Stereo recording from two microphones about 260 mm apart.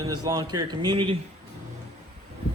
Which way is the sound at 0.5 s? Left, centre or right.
Centre.